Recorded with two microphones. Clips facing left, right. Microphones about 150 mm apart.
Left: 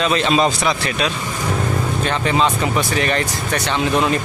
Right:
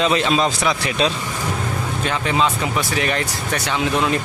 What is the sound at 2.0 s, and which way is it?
Speech, centre (ahead or behind).